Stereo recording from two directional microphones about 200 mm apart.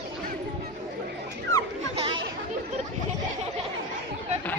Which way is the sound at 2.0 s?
25° right (ahead or behind).